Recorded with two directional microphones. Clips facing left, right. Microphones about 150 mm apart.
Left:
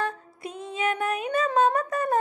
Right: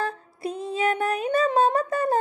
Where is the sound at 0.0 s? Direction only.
35° right (ahead or behind).